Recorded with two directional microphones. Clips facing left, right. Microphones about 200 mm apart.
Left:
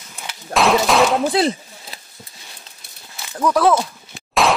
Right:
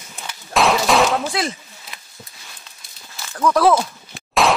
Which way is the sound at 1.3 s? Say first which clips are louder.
Left 6 dB; 35° left (ahead or behind).